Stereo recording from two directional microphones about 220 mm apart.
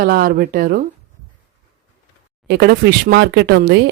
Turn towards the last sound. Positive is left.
turn(degrees=-50)  # may be behind; listen again after turning